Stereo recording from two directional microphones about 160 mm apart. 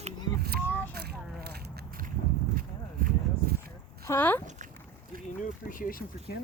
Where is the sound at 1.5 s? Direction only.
70° right (ahead or behind).